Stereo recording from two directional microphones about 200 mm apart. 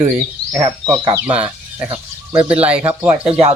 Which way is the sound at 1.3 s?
10° right (ahead or behind).